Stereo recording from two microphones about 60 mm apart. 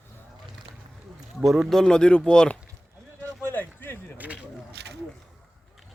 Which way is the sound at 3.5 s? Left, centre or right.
Left.